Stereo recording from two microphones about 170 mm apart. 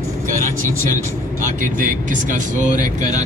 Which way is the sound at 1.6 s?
50° right (ahead or behind).